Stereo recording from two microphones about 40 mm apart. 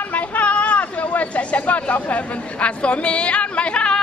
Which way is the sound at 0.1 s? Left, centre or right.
Left.